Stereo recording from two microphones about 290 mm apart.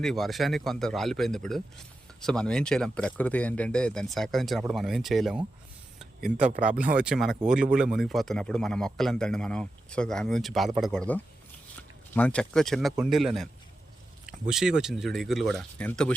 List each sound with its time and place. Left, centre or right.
0.0 s speech: centre
6.2 s speech: right
6.7 s speech: centre
14.5 s speech: centre